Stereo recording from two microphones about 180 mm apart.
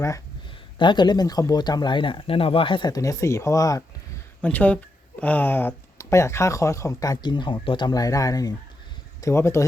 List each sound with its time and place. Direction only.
0.8 s speech: 25° left (ahead or behind)
4.4 s speech: 10° left (ahead or behind)